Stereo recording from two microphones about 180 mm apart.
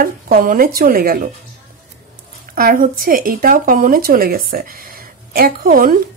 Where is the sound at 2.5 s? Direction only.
50° right (ahead or behind).